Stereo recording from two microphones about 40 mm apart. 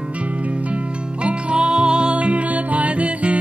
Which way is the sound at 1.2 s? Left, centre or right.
Right.